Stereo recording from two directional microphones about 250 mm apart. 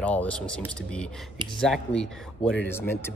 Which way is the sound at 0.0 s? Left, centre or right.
Centre.